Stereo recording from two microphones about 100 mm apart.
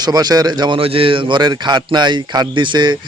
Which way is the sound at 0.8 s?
65° right (ahead or behind).